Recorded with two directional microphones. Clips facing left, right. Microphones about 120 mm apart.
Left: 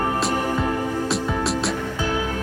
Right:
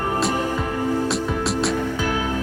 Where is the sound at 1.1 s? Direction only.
Centre (ahead or behind).